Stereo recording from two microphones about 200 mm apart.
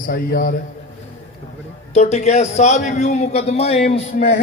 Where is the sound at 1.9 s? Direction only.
35° left (ahead or behind).